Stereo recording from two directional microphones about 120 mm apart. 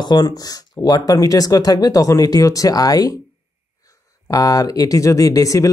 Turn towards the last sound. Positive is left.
turn(degrees=25)  # may be behind; listen again after turning